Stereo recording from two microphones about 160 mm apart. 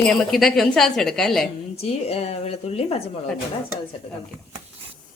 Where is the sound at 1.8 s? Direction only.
40° left (ahead or behind).